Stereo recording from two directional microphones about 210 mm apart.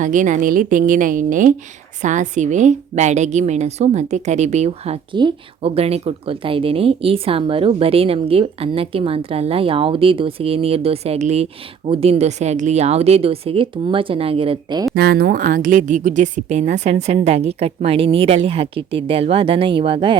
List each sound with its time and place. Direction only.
0.0 s a woman's voice: 35° right (ahead or behind)
14.9 s a woman's voice: 50° right (ahead or behind); by 20.1 s 25° right (ahead or behind)